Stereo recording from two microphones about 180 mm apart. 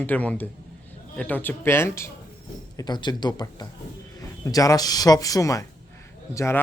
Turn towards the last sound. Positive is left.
turn(degrees=15)  # may be behind; listen again after turning